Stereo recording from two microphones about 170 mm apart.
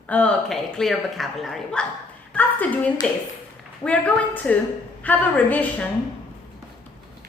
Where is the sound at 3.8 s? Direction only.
10° left (ahead or behind).